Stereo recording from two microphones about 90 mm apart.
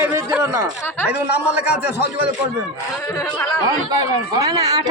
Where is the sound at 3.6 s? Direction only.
45° right (ahead or behind).